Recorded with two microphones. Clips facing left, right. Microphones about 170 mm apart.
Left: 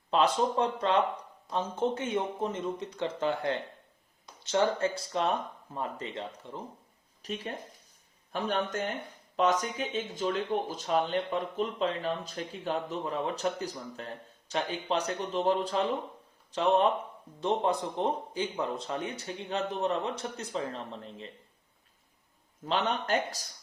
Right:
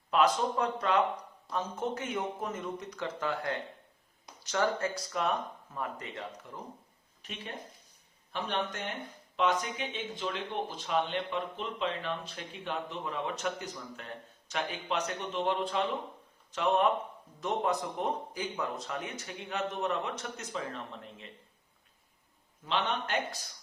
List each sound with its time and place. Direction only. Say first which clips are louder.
0.1 s speech: left 1 dB; 30° left (ahead or behind)
7.2 s speech: left 6 dB; 40° left (ahead or behind)
22.6 s speech: left 2 dB; 40° left (ahead or behind)